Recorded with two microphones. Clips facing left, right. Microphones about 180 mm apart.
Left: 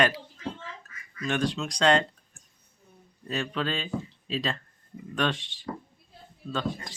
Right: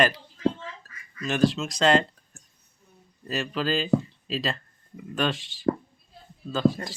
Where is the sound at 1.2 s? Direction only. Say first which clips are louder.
Right 5 dB; centre (ahead or behind).